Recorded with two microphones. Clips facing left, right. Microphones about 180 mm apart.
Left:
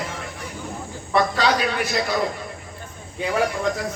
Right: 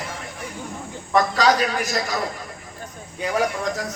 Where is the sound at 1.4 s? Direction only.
40° right (ahead or behind).